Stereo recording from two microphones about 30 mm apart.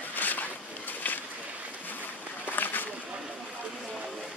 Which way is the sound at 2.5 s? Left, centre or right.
Left.